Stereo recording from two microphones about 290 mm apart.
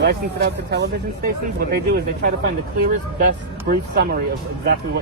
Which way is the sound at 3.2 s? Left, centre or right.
Right.